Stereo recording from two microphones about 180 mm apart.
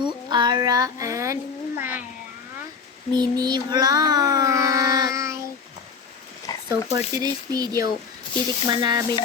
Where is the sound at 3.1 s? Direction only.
25° right (ahead or behind).